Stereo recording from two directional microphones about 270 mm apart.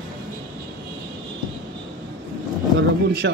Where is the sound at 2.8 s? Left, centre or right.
Right.